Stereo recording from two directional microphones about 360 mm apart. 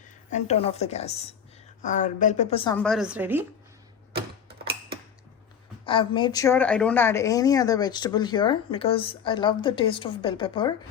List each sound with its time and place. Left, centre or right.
0.3 s a woman's voice: centre
4.1 s tick-tock: right
5.8 s a woman's voice: centre